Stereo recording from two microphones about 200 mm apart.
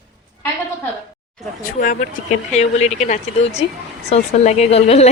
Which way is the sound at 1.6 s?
40° left (ahead or behind).